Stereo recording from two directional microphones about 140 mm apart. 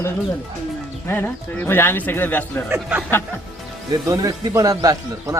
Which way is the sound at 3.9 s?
25° right (ahead or behind).